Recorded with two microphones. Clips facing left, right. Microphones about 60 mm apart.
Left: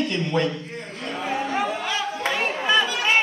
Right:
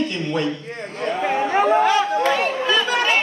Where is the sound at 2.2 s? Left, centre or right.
Centre.